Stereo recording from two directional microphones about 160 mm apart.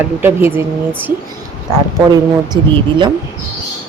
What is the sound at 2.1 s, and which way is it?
Speech, 30° right (ahead or behind).